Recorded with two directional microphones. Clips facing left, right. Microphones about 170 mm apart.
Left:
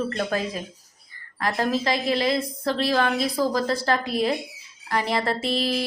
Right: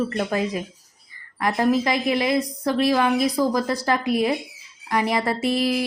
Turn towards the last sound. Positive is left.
turn(degrees=-15)  # may be behind; listen again after turning